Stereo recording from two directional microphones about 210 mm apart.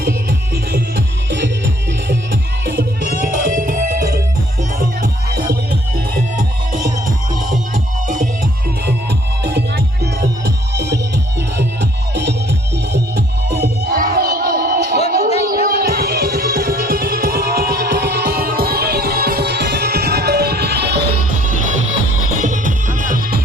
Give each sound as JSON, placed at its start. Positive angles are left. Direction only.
{"t": 0.0, "sound": "music", "side_deg": -45}
{"t": 8.0, "sound": "music", "side_deg": -40}
{"t": 8.9, "sound": "music", "side_deg": -55}
{"t": 13.8, "sound": "crowd", "side_deg": -40}
{"t": 15.4, "sound": "music", "side_deg": -45}
{"t": 21.4, "sound": "music", "side_deg": -35}